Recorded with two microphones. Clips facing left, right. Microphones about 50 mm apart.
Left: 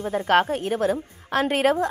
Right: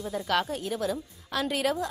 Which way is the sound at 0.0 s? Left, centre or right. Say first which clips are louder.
Left 8 dB; left.